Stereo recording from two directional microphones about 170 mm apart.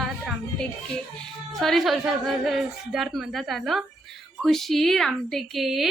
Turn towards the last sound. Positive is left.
turn(degrees=0)  # may be behind; listen again after turning